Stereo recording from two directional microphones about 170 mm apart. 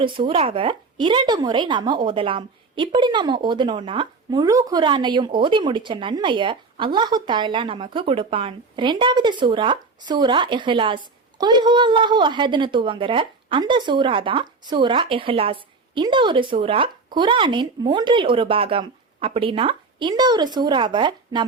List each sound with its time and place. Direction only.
0.0 s a woman's voice: 30° right (ahead or behind)